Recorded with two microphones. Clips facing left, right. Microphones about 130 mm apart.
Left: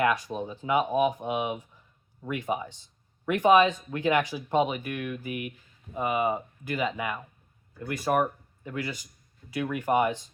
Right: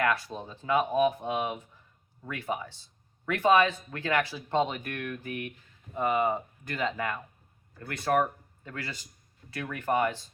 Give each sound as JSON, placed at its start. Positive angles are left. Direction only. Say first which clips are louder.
{"t": 0.0, "sound": "speech", "louder": "left 3 dB", "side_deg": 15}